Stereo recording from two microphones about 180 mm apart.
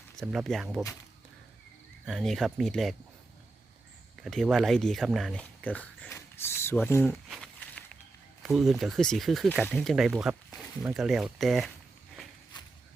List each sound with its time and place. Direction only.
0.2 s speech: centre (ahead or behind)
2.0 s speech: centre (ahead or behind)
4.2 s speech: centre (ahead or behind)
7.3 s a sound: 5° left (ahead or behind)
8.4 s speech: centre (ahead or behind)
12.5 s walk: 25° left (ahead or behind)